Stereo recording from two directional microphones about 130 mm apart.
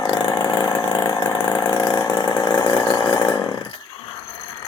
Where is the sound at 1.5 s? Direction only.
30° left (ahead or behind).